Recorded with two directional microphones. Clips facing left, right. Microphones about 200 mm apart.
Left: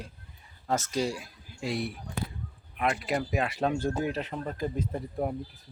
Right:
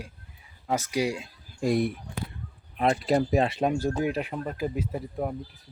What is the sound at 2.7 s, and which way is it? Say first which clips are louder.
Speech: right 6 dB; 30° right (ahead or behind).